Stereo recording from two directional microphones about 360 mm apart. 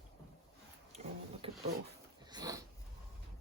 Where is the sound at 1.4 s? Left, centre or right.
Centre.